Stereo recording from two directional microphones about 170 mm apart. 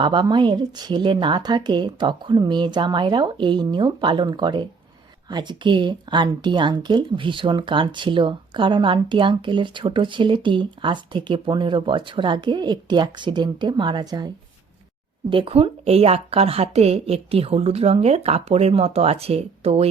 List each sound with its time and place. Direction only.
0.0 s speech: 25° right (ahead or behind)
15.3 s speech: 30° right (ahead or behind)